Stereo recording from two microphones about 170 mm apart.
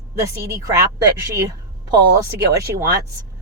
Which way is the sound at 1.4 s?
25° right (ahead or behind).